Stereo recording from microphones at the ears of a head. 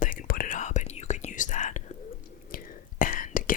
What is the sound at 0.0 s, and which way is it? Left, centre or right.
Whispering, left.